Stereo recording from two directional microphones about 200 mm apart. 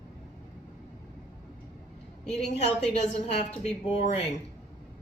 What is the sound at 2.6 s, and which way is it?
A woman's voice, 35° left (ahead or behind).